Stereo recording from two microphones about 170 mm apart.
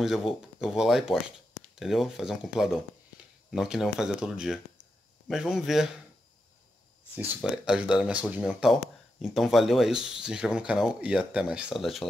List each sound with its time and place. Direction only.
0.0 s speech: centre (ahead or behind)
7.4 s speech: 5° right (ahead or behind)